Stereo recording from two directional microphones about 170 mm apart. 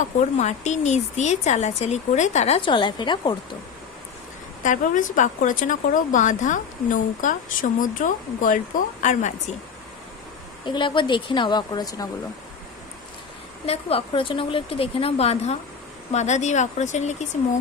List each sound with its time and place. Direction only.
0.3 s speech: 45° left (ahead or behind); by 3.3 s 25° left (ahead or behind)
4.6 s speech: 50° left (ahead or behind)
10.7 s speech: 30° left (ahead or behind)
13.7 s speech: 35° left (ahead or behind)